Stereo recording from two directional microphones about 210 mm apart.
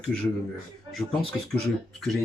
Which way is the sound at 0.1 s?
5° left (ahead or behind).